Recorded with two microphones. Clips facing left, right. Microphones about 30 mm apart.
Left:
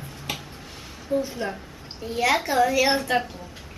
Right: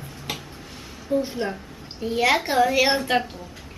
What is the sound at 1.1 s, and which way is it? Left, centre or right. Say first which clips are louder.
A woman's voice: right 2 dB; centre.